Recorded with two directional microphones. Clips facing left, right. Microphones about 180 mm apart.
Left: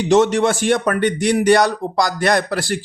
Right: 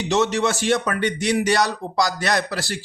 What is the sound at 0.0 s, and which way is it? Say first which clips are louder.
A man's voice: left 6 dB; 50° left (ahead or behind).